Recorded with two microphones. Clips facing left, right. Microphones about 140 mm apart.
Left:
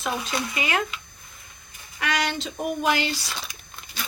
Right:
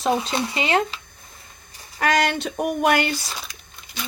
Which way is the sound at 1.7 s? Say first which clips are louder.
Right 7 dB; 45° right (ahead or behind).